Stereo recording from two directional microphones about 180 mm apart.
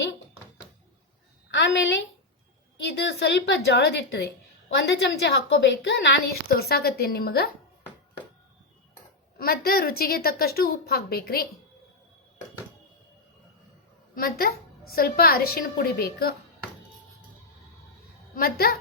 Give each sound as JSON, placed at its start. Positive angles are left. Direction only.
{"t": 1.5, "sound": "a sound", "side_deg": 85}
{"t": 2.8, "sound": "a woman's voice", "side_deg": 65}
{"t": 6.5, "sound": "a woman's voice", "side_deg": 60}
{"t": 9.4, "sound": "a woman's voice", "side_deg": 55}
{"t": 14.2, "sound": "a woman's voice", "side_deg": 55}
{"t": 18.3, "sound": "a woman's voice", "side_deg": 60}